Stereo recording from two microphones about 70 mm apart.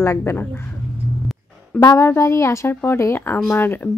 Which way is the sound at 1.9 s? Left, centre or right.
Left.